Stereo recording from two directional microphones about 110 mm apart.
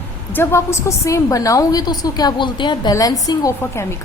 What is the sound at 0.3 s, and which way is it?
A woman's voice, 25° left (ahead or behind).